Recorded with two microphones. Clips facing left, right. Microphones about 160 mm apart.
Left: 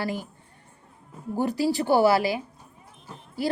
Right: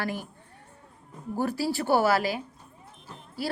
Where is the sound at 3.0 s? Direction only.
15° left (ahead or behind).